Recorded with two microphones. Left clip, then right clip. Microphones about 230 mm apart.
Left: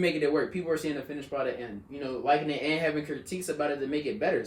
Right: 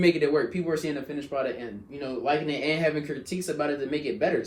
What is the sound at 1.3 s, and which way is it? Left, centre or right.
Speech, centre.